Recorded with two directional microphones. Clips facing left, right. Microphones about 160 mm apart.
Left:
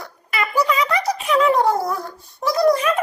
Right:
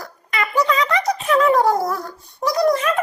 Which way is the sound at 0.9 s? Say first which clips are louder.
Right 1 dB; 20° right (ahead or behind).